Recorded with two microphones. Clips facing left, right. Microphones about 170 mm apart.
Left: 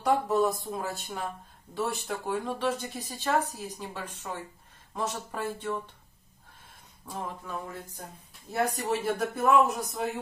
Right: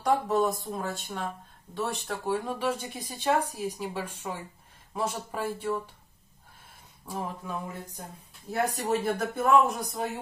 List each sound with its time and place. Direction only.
0.0 s speech: centre (ahead or behind)
7.2 s speech: 10° right (ahead or behind)
8.7 s speech: centre (ahead or behind)